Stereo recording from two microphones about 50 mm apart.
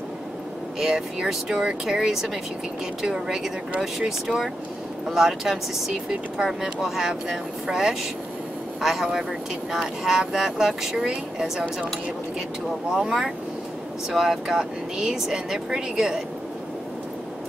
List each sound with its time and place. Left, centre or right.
0.7 s speech: centre
14.1 s speech: centre